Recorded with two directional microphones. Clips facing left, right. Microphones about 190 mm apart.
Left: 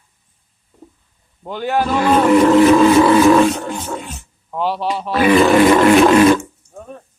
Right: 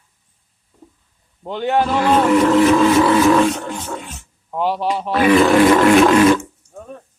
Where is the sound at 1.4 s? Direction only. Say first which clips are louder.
Right 1 dB; 20° right (ahead or behind).